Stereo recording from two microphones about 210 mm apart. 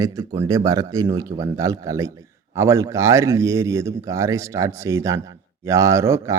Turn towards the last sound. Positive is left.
turn(degrees=-15)  # may be behind; listen again after turning